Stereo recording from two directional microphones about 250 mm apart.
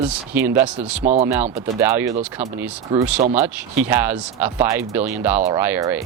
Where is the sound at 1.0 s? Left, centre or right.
Right.